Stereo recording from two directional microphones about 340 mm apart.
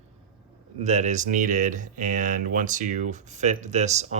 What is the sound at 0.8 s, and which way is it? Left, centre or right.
Speech, centre.